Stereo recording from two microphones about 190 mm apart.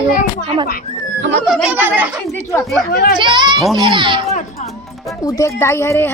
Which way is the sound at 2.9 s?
50° left (ahead or behind).